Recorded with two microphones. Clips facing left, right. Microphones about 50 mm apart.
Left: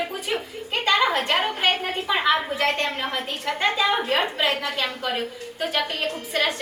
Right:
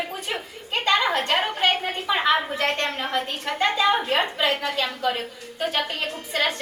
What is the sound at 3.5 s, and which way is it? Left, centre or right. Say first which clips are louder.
Speech: right 2 dB; centre.